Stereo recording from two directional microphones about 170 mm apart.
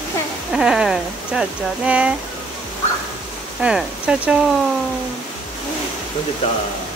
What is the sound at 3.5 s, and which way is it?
Speech, 5° right (ahead or behind).